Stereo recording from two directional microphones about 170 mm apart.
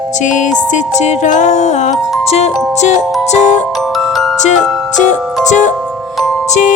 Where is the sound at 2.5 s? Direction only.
Centre (ahead or behind).